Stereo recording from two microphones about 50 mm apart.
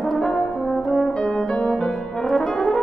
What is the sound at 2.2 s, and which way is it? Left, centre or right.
French horn, centre.